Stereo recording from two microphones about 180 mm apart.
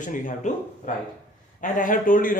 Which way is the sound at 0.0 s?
45° left (ahead or behind).